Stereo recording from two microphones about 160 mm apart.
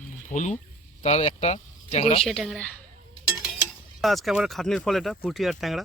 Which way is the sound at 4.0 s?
Centre (ahead or behind).